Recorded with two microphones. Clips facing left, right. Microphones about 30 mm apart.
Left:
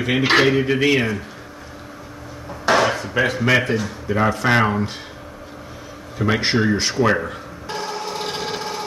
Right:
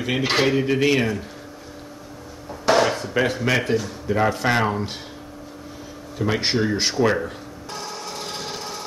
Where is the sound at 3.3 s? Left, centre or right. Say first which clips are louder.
Left 4 dB; left.